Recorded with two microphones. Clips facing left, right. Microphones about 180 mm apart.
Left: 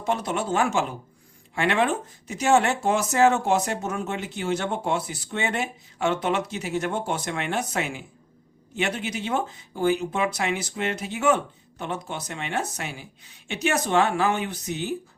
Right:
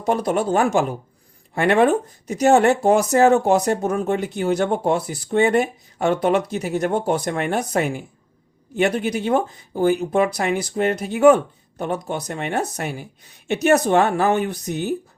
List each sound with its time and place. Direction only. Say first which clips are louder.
0.0 s speech: right 6 dB; 40° right (ahead or behind)
12.8 s speech: right 7 dB; 55° right (ahead or behind)
13.5 s speech: right 7 dB; 40° right (ahead or behind)